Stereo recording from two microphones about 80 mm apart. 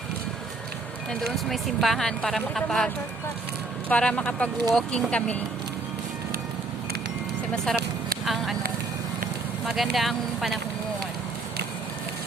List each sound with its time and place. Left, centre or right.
1.2 s speech: centre
3.8 s speech: centre
7.5 s speech: centre
9.6 s speech: centre